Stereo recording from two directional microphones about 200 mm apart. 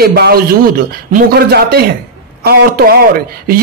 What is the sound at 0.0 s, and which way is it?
A woman's voice, 50° right (ahead or behind).